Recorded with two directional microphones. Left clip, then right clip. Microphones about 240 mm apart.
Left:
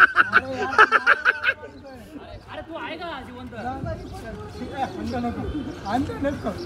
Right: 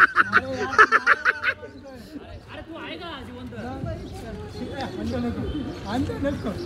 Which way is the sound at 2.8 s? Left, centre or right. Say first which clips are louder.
Left 3 dB; centre.